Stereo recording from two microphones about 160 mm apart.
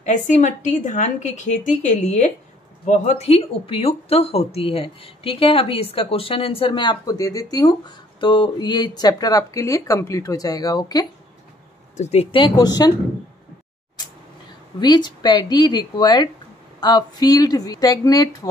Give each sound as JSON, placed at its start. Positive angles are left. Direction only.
{"t": 0.0, "sound": "a woman's voice", "side_deg": 50}
{"t": 12.0, "sound": "speech", "side_deg": 40}
{"t": 14.8, "sound": "a woman's voice", "side_deg": 25}